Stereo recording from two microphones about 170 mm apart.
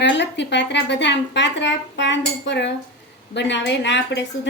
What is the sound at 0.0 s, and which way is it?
A woman's voice, 90° left.